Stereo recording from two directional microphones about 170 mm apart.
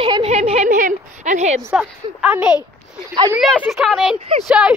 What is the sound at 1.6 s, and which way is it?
Speech, 10° right (ahead or behind).